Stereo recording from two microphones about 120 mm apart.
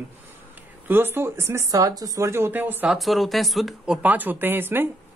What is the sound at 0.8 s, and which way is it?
Speech, 20° right (ahead or behind).